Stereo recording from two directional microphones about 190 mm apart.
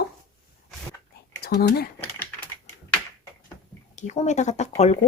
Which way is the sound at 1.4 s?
55° left (ahead or behind).